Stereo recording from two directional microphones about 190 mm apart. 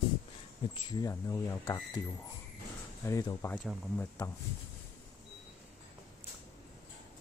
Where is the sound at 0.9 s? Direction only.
20° left (ahead or behind).